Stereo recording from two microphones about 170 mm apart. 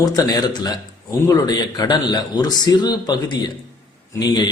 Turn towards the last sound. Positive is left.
turn(degrees=25)  # may be behind; listen again after turning